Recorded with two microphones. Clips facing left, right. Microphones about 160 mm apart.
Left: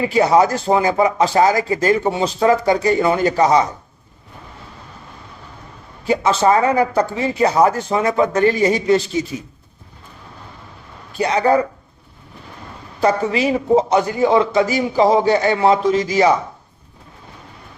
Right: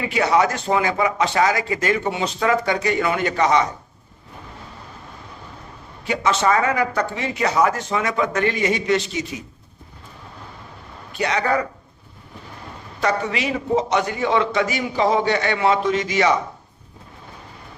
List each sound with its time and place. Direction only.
0.1 s speech: 35° left (ahead or behind)
6.1 s speech: 30° left (ahead or behind)
11.2 s speech: 30° left (ahead or behind)
13.0 s speech: 35° left (ahead or behind)